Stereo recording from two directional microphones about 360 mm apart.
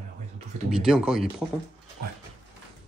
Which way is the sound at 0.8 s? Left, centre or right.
Centre.